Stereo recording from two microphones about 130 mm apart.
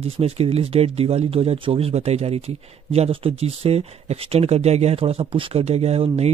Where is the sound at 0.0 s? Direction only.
50° right (ahead or behind).